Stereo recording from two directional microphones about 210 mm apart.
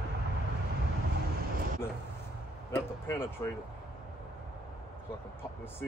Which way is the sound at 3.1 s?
10° left (ahead or behind).